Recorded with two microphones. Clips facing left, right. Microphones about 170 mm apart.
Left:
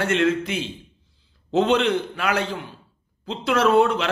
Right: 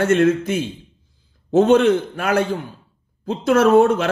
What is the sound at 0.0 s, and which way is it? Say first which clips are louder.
A man's voice: right 5 dB; 45° right (ahead or behind).